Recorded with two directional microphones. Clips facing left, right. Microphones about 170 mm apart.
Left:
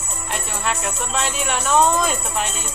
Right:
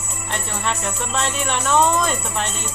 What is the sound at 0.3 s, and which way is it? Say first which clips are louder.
Speech: even; 5° left (ahead or behind).